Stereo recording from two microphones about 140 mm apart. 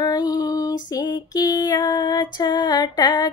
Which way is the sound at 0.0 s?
25° left (ahead or behind).